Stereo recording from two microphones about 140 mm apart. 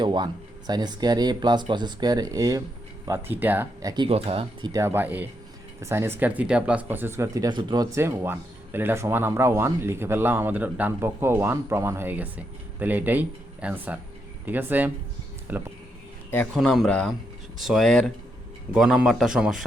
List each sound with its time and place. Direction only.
0.0 s speech: 35° right (ahead or behind)
3.1 s speech: 15° right (ahead or behind)
3.8 s speech: 30° right (ahead or behind)
4.1 s speech: 40° right (ahead or behind)
4.7 s speech: 20° right (ahead or behind)
16.6 s speech: centre (ahead or behind)